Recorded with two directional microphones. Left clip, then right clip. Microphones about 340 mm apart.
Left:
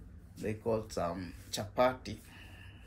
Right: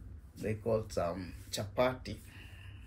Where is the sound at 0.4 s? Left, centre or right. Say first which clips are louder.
Right 1 dB; centre.